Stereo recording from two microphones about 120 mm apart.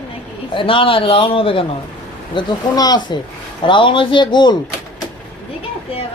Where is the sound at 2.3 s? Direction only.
40° left (ahead or behind).